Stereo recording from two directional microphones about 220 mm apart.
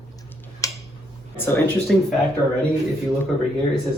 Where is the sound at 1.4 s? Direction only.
10° left (ahead or behind).